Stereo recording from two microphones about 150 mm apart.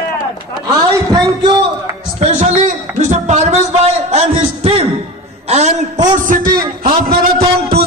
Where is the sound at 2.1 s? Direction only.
45° right (ahead or behind).